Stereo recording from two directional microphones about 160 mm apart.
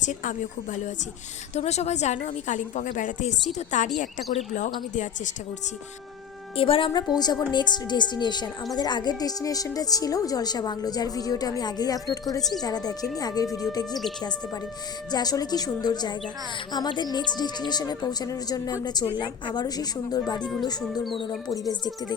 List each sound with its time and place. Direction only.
0.0 s a woman's voice: 50° left (ahead or behind)
6.6 s a woman's voice: 35° left (ahead or behind)
12.4 s speech: centre (ahead or behind)
12.6 s speech: 25° left (ahead or behind)
15.1 s speech: 25° left (ahead or behind)